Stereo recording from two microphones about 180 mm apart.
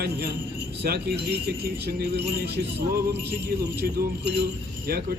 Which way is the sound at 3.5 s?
65° right (ahead or behind).